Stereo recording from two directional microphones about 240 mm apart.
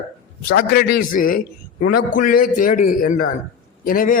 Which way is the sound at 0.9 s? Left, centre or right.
Left.